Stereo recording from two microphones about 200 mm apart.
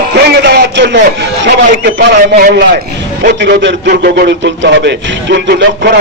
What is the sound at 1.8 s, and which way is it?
A man's voice, 60° right (ahead or behind).